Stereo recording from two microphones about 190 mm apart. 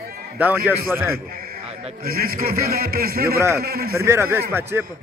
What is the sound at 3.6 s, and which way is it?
Speech, 50° right (ahead or behind).